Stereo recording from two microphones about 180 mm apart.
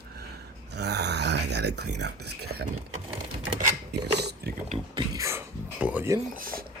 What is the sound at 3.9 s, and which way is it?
Mechanisms, 65° right (ahead or behind).